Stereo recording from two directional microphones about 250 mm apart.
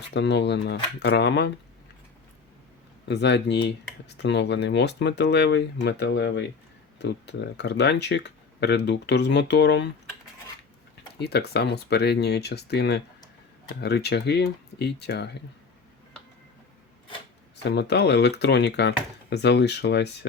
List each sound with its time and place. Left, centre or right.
0.1 s speech: left
3.1 s speech: left
11.2 s speech: left
17.6 s speech: left